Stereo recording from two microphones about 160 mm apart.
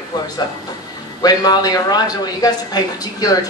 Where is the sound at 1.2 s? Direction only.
25° left (ahead or behind).